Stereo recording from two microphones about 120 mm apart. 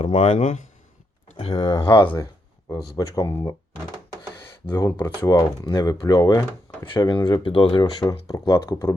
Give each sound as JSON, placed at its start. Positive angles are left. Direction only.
{"t": 0.1, "sound": "speech", "side_deg": 90}
{"t": 1.4, "sound": "speech", "side_deg": 55}
{"t": 1.8, "sound": "speech", "side_deg": 45}
{"t": 2.9, "sound": "speech", "side_deg": 25}
{"t": 4.7, "sound": "speech", "side_deg": 20}
{"t": 5.3, "sound": "speech", "side_deg": 30}
{"t": 6.8, "sound": "speech", "side_deg": 40}
{"t": 8.3, "sound": "speech", "side_deg": 25}